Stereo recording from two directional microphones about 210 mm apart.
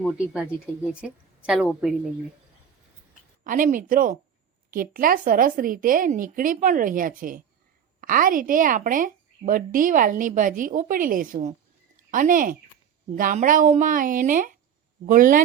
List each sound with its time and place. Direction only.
0.9 s a woman's voice: centre (ahead or behind)
3.4 s a woman's voice: 40° right (ahead or behind)